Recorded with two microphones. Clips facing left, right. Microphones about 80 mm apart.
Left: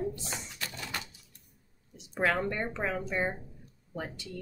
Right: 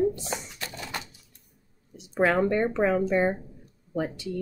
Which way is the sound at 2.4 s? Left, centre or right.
Right.